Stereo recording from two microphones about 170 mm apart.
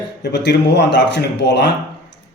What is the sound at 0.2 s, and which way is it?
Speech, 85° left.